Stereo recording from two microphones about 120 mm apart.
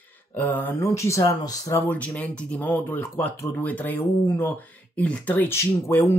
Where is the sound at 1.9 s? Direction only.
10° left (ahead or behind).